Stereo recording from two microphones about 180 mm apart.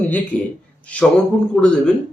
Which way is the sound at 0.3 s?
10° left (ahead or behind).